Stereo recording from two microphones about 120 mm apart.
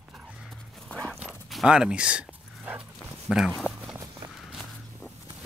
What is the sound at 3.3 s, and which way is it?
Speech, 5° right (ahead or behind).